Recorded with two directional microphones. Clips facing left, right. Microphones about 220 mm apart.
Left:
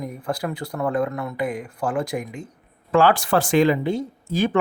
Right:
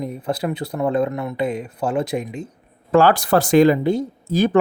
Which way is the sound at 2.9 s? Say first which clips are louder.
Right 3 dB; 40° right (ahead or behind).